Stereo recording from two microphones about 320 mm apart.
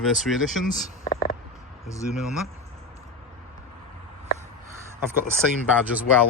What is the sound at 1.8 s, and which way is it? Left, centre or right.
Speech, centre.